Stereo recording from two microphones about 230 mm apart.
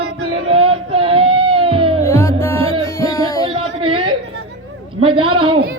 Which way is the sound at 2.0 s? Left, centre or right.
Centre.